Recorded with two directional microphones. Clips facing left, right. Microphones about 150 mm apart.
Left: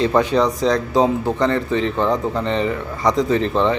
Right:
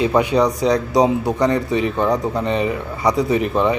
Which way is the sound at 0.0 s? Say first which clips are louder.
Even; 10° right (ahead or behind).